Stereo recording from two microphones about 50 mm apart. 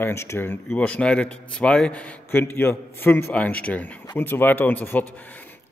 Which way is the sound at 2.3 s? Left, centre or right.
Left.